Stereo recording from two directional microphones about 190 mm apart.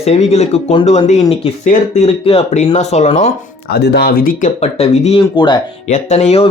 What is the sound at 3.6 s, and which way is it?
Speech, 55° left (ahead or behind).